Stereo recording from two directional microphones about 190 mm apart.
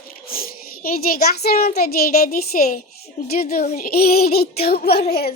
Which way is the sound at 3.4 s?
50° left (ahead or behind).